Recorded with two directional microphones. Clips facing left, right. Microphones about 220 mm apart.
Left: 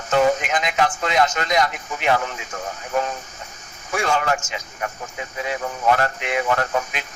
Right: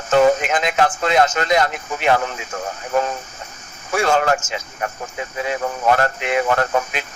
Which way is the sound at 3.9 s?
45° right (ahead or behind).